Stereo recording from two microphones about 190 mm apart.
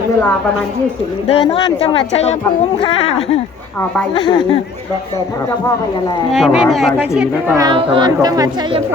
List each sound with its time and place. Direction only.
1.3 s speech: 30° left (ahead or behind)
6.3 s speech: centre (ahead or behind)
7.2 s speech: 10° right (ahead or behind)